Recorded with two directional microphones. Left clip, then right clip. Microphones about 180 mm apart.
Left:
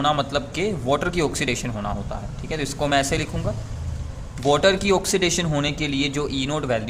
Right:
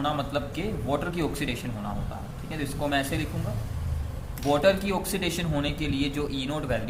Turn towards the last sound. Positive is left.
turn(degrees=40)  # may be behind; listen again after turning